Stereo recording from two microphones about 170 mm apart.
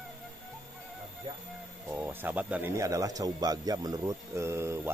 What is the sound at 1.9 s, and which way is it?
A man's voice, 10° right (ahead or behind).